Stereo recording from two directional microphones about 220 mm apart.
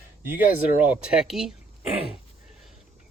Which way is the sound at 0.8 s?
5° right (ahead or behind).